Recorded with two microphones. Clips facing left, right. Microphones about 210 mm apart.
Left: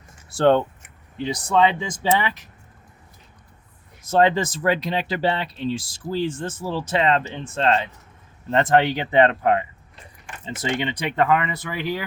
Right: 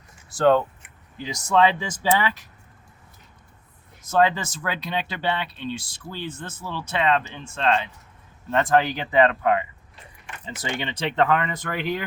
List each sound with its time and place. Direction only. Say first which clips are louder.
0.3 s speech: left 1 dB; 30° left (ahead or behind)
4.1 s speech: left 3 dB; 30° left (ahead or behind)
10.4 s speech: left 5 dB; 20° left (ahead or behind); by 12.0 s 5° left (ahead or behind)